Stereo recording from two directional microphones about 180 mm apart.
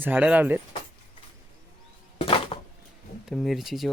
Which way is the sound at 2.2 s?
30° left (ahead or behind).